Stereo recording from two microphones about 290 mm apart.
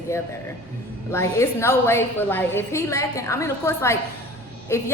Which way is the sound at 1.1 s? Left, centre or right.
Centre.